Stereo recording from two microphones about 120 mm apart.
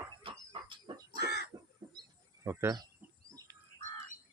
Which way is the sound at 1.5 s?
30° right (ahead or behind).